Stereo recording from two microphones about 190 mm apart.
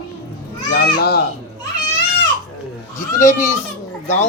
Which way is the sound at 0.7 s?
60° left (ahead or behind).